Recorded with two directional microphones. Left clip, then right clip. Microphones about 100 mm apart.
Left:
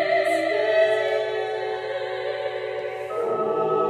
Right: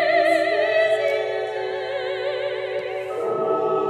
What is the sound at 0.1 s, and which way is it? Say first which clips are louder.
Opera: right 3 dB; centre (ahead or behind).